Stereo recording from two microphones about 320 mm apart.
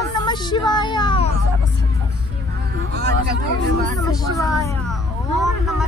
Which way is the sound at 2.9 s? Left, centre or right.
Right.